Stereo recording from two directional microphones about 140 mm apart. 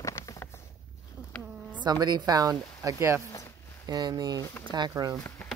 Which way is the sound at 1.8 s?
30° right (ahead or behind).